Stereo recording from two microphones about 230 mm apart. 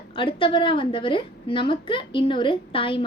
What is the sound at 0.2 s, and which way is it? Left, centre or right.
Speech, left.